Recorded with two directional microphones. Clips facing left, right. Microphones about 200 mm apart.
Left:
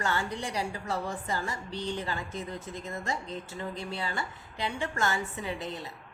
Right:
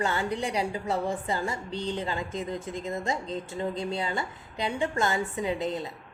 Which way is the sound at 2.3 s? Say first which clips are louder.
Right 5 dB; 90° right.